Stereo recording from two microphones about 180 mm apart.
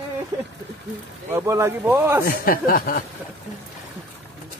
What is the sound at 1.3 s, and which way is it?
Speech, 15° right (ahead or behind).